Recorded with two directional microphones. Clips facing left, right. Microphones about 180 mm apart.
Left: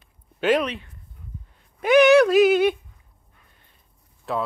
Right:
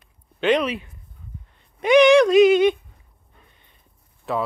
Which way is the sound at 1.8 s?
5° left (ahead or behind).